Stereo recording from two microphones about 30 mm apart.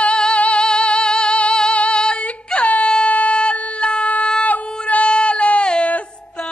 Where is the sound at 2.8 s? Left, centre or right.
Left.